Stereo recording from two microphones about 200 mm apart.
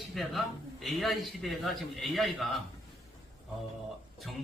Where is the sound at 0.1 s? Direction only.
Centre (ahead or behind).